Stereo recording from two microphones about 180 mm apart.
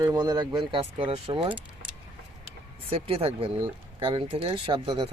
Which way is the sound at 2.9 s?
30° right (ahead or behind).